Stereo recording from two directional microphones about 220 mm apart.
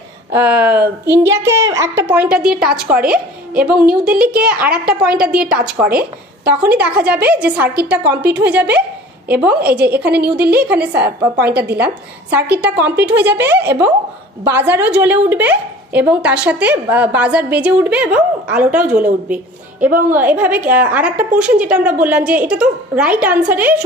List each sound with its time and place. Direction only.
0.3 s a woman's voice: 5° right (ahead or behind)
5.9 s speech: 40° right (ahead or behind)
6.6 s a woman's voice: 5° right (ahead or behind)